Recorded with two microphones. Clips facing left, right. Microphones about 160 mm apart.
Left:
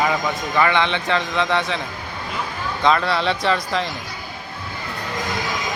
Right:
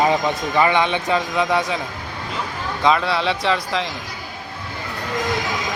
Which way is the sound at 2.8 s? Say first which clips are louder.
Even; 5° right (ahead or behind).